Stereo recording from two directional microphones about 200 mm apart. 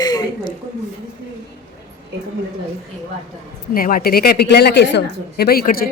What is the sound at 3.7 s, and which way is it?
A woman's voice, 45° left (ahead or behind).